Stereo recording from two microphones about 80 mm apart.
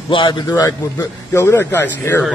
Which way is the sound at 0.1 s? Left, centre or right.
Left.